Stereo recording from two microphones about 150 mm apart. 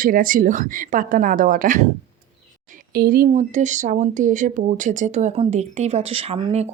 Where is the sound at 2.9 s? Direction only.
90° right.